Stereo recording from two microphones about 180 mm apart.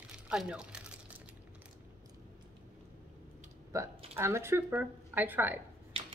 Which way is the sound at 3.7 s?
15° right (ahead or behind).